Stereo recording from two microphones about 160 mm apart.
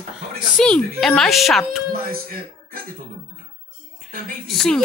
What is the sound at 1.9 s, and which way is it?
Speech, 65° right (ahead or behind).